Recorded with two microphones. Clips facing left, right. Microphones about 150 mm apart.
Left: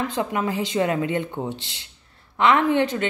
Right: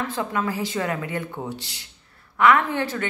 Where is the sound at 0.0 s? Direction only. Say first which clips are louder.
Left 2 dB; 20° left (ahead or behind).